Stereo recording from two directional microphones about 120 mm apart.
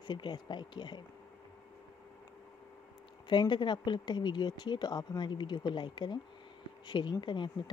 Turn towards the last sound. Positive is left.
turn(degrees=40)  # may be behind; listen again after turning